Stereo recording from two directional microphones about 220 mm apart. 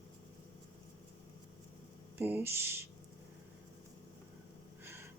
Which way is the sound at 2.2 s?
10° right (ahead or behind).